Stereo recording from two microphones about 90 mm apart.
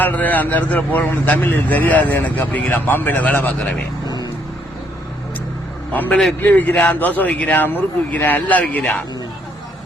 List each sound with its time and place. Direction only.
0.0 s a man's voice: 20° left (ahead or behind)
4.0 s vehicle: 45° left (ahead or behind)
5.9 s a man's voice: 20° left (ahead or behind)